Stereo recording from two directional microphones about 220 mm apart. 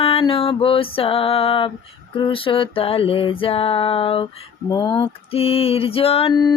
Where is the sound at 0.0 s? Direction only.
25° left (ahead or behind).